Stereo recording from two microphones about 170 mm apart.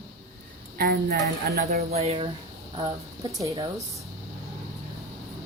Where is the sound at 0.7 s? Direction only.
60° right (ahead or behind).